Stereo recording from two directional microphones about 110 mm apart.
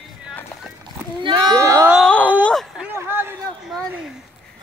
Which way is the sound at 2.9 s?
20° right (ahead or behind).